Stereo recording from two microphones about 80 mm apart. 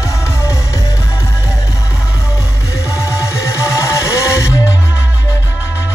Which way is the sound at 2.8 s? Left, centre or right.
Left.